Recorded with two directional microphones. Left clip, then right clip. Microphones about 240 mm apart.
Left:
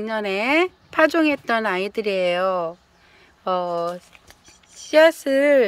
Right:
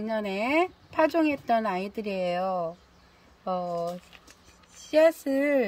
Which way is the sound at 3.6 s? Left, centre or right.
Left.